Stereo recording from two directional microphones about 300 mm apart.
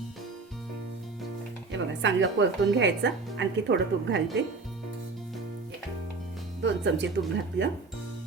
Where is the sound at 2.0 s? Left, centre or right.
Right.